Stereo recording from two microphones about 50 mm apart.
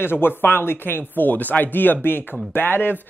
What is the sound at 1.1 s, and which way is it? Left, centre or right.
Speech, left.